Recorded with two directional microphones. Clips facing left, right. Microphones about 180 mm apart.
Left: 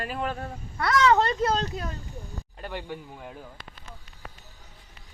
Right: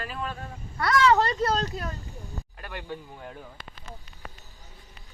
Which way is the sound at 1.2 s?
Centre (ahead or behind).